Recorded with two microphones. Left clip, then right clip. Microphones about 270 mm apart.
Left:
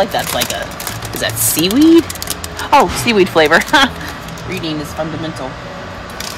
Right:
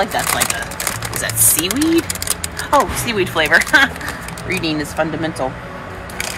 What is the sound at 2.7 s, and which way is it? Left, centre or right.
Speech, left.